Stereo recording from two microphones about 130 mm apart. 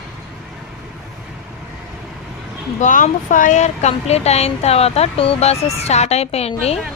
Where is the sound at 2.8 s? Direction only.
80° left.